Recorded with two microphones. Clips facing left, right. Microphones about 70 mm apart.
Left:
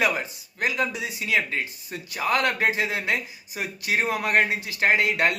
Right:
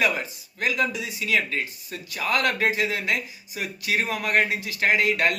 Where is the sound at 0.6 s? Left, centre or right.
Left.